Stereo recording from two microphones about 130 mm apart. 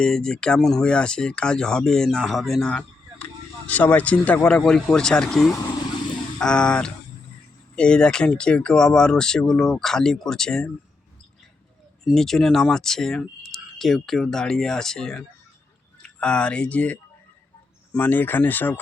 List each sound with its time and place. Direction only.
0.0 s speech: 5° left (ahead or behind)
12.0 s speech: centre (ahead or behind)